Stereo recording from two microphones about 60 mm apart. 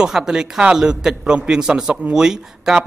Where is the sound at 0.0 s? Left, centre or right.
Centre.